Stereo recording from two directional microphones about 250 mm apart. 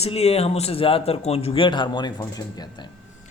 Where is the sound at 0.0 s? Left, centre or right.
Left.